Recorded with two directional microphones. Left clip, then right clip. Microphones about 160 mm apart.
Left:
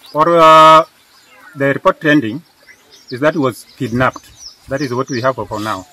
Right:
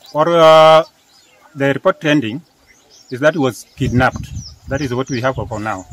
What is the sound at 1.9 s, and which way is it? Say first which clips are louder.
Speech: left 3 dB; 35° right (ahead or behind).